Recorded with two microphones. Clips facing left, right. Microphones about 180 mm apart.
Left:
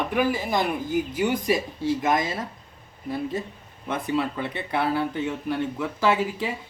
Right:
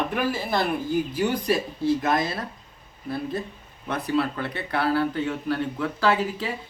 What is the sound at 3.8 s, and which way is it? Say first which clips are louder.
Speech: right 1 dB; 20° left (ahead or behind).